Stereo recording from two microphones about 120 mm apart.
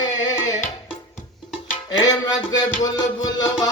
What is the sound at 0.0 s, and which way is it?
Music, 35° left (ahead or behind).